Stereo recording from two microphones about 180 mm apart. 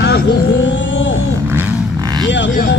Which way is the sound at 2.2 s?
90° left.